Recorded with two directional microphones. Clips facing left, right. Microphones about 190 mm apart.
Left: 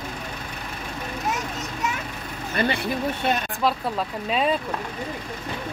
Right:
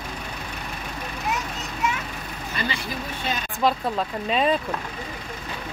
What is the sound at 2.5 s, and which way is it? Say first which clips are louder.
Speech: left 6 dB; 60° left (ahead or behind).